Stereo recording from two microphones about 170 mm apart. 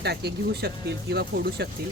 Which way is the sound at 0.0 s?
75° right (ahead or behind).